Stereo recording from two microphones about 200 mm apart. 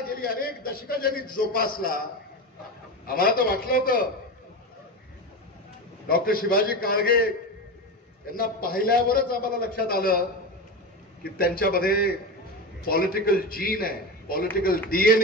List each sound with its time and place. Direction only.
0.1 s a man's voice: 50° left (ahead or behind)
3.1 s a man's voice: 45° left (ahead or behind)
6.0 s a man's voice: 50° left (ahead or behind)
11.2 s a man's voice: 50° left (ahead or behind)